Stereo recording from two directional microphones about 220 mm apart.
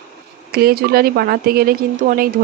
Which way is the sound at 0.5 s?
45° right (ahead or behind).